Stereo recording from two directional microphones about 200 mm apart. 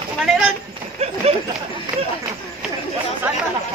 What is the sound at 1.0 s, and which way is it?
Speech, 30° right (ahead or behind).